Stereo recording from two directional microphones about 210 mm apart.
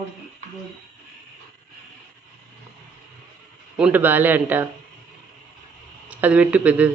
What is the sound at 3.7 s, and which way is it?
Speech, 5° right (ahead or behind).